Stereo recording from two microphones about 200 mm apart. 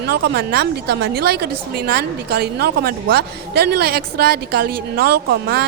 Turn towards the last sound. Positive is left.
turn(degrees=-55)  # may be behind; listen again after turning